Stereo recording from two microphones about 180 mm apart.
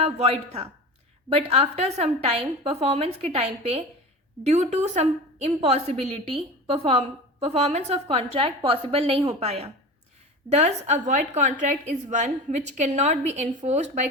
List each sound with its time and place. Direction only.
0.0 s a woman's voice: 35° right (ahead or behind)